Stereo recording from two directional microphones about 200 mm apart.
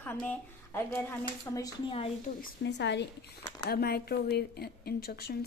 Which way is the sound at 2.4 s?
60° left (ahead or behind).